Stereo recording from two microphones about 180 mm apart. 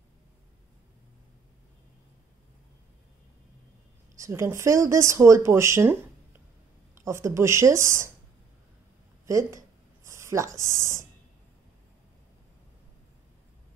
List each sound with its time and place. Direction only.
4.2 s speech: 15° right (ahead or behind)
7.1 s speech: 15° right (ahead or behind)
9.2 s a sound: 15° right (ahead or behind)